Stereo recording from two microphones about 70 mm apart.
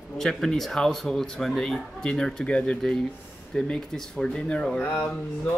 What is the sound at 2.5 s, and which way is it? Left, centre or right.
Speech, centre.